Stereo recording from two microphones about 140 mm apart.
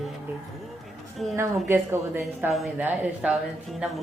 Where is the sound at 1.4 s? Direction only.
15° right (ahead or behind).